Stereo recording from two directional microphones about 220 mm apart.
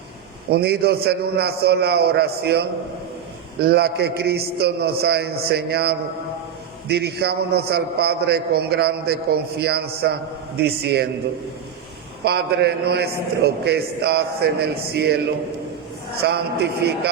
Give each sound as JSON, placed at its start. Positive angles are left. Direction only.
{"t": 0.5, "sound": "a man's voice", "side_deg": -45}
{"t": 12.2, "sound": "a man's voice", "side_deg": -50}
{"t": 16.2, "sound": "a man's voice", "side_deg": -50}